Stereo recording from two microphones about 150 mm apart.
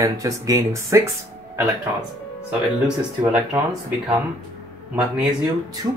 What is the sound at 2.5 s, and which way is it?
Speech, 10° right (ahead or behind).